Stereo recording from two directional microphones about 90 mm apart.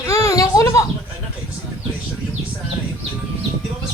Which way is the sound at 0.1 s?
40° left (ahead or behind).